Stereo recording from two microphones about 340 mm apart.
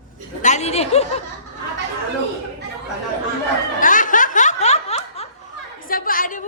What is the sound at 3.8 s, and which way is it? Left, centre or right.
Snicker, left.